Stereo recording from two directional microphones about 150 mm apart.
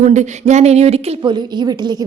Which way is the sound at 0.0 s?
50° right (ahead or behind).